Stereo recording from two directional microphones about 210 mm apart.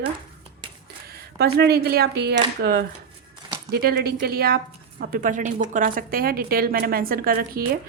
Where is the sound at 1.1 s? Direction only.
50° right (ahead or behind).